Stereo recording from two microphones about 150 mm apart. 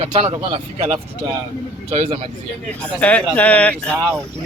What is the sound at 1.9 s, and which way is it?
Speech, 40° right (ahead or behind).